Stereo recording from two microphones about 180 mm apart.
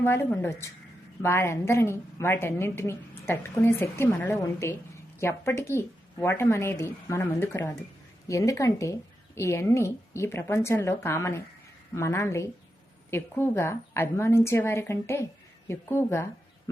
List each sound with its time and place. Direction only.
0.0 s a woman's voice: 15° left (ahead or behind)